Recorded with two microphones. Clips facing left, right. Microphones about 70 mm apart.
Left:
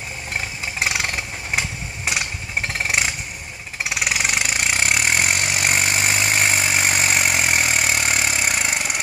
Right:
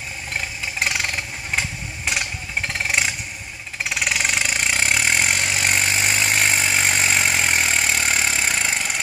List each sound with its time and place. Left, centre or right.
0.7 s vehicle: centre
3.9 s engine: centre